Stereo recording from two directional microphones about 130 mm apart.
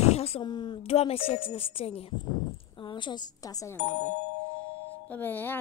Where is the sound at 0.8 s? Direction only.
50° left (ahead or behind).